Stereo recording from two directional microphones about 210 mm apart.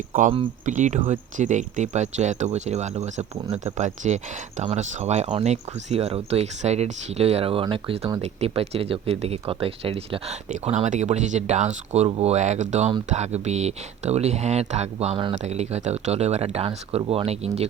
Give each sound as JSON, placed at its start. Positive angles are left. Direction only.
{"t": 0.3, "sound": "speech", "side_deg": -35}